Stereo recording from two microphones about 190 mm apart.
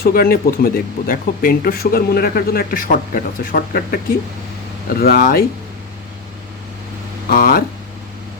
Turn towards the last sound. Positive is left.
turn(degrees=50)  # may be behind; listen again after turning